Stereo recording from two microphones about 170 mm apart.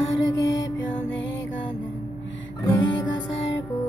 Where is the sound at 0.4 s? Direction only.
90° left.